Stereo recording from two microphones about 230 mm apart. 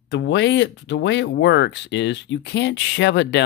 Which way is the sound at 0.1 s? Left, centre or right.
Left.